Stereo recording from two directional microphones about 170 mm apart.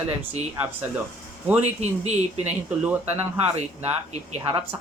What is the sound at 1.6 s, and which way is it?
Speech, 40° right (ahead or behind).